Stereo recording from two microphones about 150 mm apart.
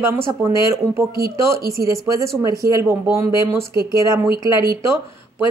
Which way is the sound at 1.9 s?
20° right (ahead or behind).